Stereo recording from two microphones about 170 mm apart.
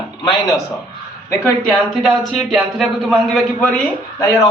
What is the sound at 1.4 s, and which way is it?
Speech, centre (ahead or behind).